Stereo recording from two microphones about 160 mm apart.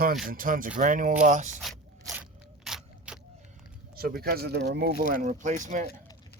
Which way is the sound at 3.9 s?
70° right (ahead or behind).